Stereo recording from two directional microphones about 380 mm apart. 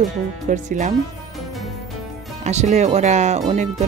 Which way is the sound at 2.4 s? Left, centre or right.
Centre.